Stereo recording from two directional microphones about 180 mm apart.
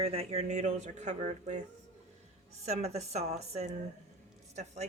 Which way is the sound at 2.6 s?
35° right (ahead or behind).